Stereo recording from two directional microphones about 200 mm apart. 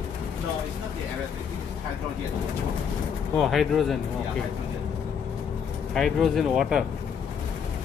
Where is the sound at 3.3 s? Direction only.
Centre (ahead or behind).